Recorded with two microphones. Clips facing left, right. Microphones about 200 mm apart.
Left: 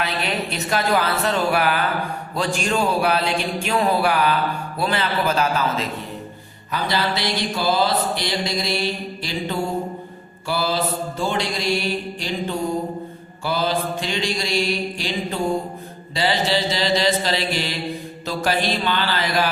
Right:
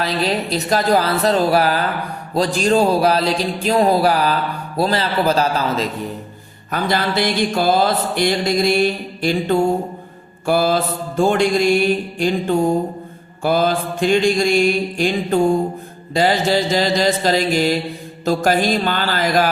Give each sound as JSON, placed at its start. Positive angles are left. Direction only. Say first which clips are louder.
{"t": 0.0, "sound": "speech", "louder": "right 5 dB", "side_deg": -35}
{"t": 6.7, "sound": "mantra", "louder": "right 3 dB", "side_deg": -50}